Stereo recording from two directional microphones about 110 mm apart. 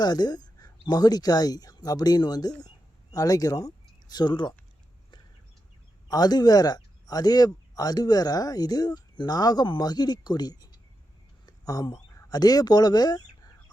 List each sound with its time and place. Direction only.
0.0 s speech: 40° left (ahead or behind)
2.6 s a sound: 35° left (ahead or behind)
4.1 s speech: 40° left (ahead or behind)
6.1 s speech: 35° left (ahead or behind)